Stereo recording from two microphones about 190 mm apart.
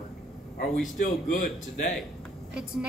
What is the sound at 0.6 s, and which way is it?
A man's voice, 45° left (ahead or behind).